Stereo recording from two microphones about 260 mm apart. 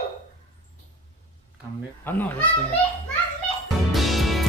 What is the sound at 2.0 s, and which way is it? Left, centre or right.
Speech, centre.